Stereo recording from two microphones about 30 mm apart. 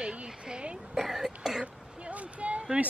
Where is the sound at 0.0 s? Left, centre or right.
Right.